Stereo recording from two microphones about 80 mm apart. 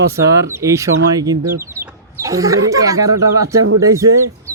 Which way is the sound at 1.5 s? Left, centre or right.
Right.